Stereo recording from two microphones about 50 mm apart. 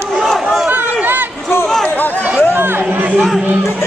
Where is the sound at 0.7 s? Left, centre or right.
Right.